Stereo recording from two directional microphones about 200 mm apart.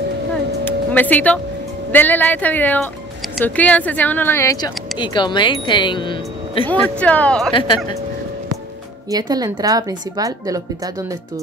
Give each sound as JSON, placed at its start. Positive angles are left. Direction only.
{"t": 0.7, "sound": "music", "side_deg": 10}
{"t": 1.9, "sound": "speech", "side_deg": 10}
{"t": 6.6, "sound": "speech", "side_deg": 5}
{"t": 9.1, "sound": "speech", "side_deg": -20}